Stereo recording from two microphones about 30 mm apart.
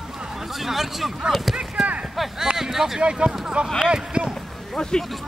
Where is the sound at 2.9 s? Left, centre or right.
Right.